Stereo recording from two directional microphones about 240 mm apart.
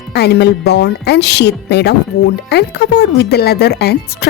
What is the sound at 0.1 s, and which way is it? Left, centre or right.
A woman's voice, left.